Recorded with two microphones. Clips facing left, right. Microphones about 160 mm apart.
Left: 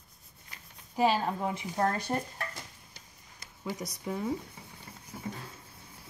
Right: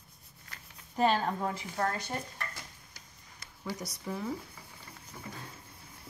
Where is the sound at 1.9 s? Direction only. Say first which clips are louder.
Left 4 dB; 35° left (ahead or behind).